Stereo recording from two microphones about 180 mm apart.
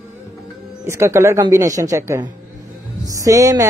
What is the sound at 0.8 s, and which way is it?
A woman's voice, 15° right (ahead or behind).